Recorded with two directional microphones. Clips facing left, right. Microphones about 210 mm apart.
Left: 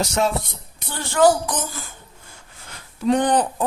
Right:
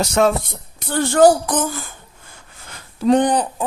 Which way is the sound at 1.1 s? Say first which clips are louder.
Right 3 dB; 50° right (ahead or behind).